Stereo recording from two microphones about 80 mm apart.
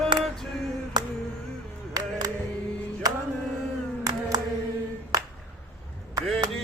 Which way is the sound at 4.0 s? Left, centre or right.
Right.